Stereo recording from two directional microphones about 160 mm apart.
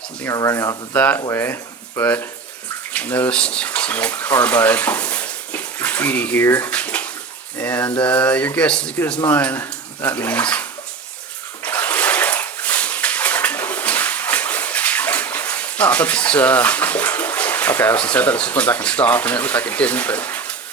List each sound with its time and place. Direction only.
0.2 s speech: 20° left (ahead or behind)
0.9 s speech: 10° left (ahead or behind)
11.6 s bathtub: 10° left (ahead or behind)